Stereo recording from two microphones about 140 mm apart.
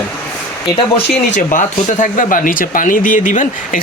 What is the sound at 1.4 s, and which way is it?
Speech, 70° left (ahead or behind).